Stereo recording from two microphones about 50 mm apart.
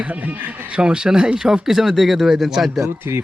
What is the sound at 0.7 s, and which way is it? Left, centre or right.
Speech, centre.